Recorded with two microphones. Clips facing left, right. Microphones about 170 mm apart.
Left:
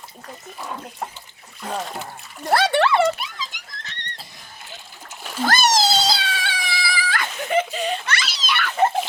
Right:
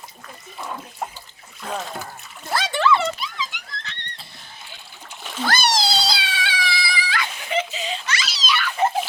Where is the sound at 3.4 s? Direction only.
40° left (ahead or behind).